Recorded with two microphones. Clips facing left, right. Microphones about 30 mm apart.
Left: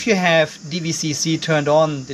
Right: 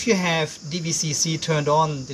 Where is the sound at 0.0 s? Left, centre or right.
Centre.